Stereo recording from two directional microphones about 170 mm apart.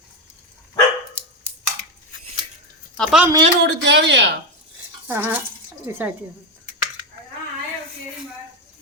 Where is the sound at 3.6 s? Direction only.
85° right.